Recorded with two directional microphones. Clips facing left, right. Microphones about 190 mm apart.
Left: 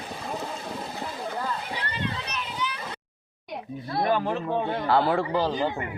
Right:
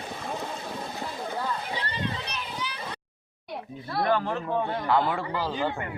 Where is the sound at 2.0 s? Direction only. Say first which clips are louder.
Left 1 dB; 35° right (ahead or behind).